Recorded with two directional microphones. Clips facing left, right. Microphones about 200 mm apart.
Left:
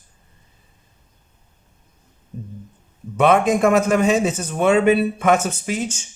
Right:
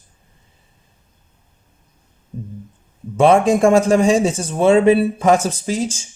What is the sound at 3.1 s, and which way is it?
Speech, 30° right (ahead or behind).